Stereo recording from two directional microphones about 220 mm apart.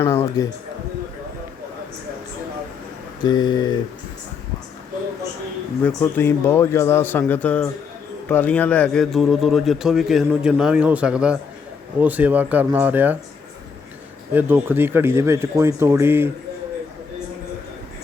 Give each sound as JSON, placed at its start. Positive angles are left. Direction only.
{"t": 0.0, "sound": "music", "side_deg": 10}
{"t": 3.2, "sound": "speech", "side_deg": 20}
{"t": 5.8, "sound": "a man's voice", "side_deg": 10}
{"t": 14.3, "sound": "a man's voice", "side_deg": -10}